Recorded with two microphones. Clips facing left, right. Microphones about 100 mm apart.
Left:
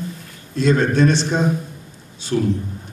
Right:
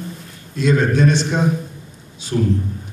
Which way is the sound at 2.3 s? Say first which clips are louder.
Even; 30° right (ahead or behind).